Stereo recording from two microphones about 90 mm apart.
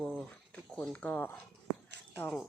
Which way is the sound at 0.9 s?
15° left (ahead or behind).